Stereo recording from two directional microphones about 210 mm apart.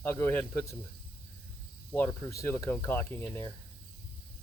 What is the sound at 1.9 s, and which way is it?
Speech, 10° left (ahead or behind).